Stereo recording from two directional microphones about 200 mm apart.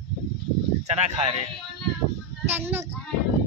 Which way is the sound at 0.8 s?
35° right (ahead or behind).